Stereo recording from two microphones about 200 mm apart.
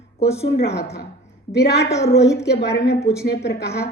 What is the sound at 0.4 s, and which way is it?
A woman's voice, 55° left (ahead or behind).